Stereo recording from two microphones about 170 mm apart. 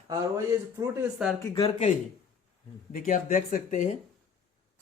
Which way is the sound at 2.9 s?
55° left (ahead or behind).